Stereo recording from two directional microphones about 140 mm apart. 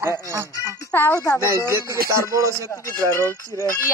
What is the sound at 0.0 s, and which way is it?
Speech, 20° right (ahead or behind).